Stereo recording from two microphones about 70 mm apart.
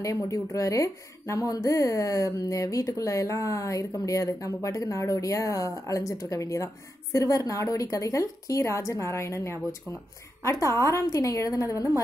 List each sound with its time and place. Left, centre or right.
0.0 s a woman's voice: left